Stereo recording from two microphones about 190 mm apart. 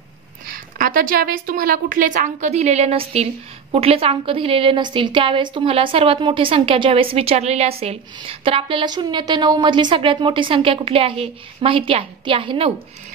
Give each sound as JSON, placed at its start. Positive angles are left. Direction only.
{"t": 0.5, "sound": "a woman's voice", "side_deg": -50}